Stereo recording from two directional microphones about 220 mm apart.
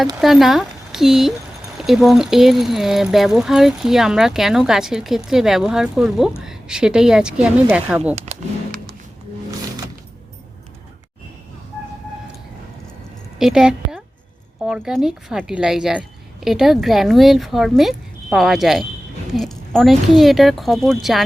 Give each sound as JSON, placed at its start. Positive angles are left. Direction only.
{"t": 0.2, "sound": "speech", "side_deg": 0}
{"t": 8.1, "sound": "speech", "side_deg": -30}
{"t": 13.4, "sound": "a woman's voice", "side_deg": 0}